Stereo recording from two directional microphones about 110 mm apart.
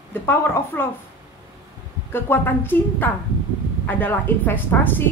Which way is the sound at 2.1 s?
20° left (ahead or behind).